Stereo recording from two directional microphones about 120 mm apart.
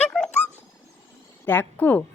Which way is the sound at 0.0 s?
10° left (ahead or behind).